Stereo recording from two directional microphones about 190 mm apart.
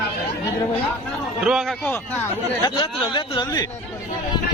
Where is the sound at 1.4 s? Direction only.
Centre (ahead or behind).